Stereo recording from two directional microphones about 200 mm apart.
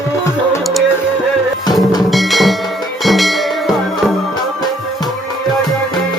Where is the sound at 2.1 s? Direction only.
Centre (ahead or behind).